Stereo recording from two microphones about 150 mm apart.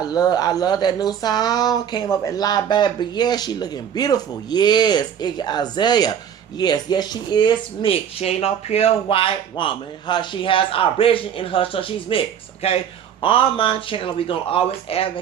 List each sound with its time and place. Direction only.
0.0 s speech: 25° left (ahead or behind)